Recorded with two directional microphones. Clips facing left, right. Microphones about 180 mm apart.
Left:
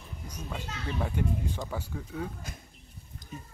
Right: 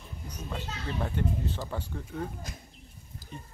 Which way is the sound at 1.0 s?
10° left (ahead or behind).